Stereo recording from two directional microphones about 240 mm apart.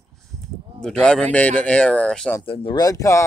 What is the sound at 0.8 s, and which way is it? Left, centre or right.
Speech, centre.